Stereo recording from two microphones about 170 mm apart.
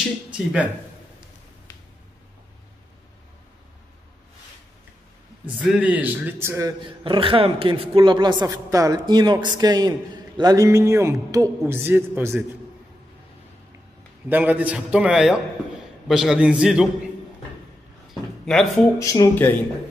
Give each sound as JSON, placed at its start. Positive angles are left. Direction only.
{"t": 0.3, "sound": "speech", "side_deg": -5}
{"t": 5.4, "sound": "a man's voice", "side_deg": -10}
{"t": 6.8, "sound": "a woman's voice", "side_deg": -30}
{"t": 14.3, "sound": "a man's voice", "side_deg": -10}
{"t": 18.4, "sound": "a man's voice", "side_deg": 5}
{"t": 18.9, "sound": "speech", "side_deg": 20}